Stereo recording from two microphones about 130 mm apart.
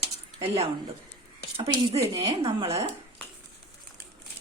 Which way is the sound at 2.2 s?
45° right (ahead or behind).